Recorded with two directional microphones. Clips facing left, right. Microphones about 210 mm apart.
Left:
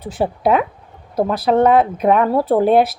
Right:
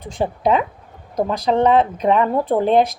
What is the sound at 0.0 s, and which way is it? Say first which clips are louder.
A woman's voice: left 2 dB; 5° left (ahead or behind).